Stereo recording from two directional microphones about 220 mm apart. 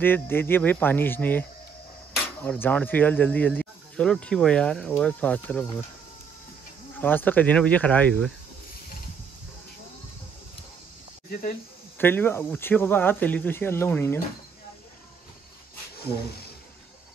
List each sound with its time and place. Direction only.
0.0 s speech: 10° left (ahead or behind)
7.0 s speech: 10° left (ahead or behind)
11.2 s speech: 40° left (ahead or behind)
12.0 s speech: 10° left (ahead or behind)